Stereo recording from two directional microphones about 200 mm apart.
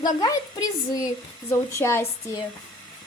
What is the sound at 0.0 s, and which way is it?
A woman's voice, 20° left (ahead or behind).